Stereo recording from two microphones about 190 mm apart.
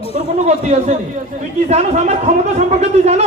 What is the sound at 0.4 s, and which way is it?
A man's voice, 35° right (ahead or behind).